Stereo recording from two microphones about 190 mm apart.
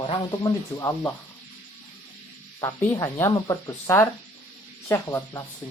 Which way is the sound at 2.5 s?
15° left (ahead or behind).